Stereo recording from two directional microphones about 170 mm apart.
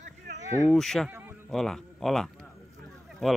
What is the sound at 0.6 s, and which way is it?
Speech, 5° left (ahead or behind).